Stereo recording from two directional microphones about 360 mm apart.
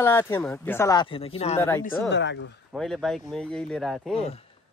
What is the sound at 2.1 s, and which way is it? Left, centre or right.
Speech, left.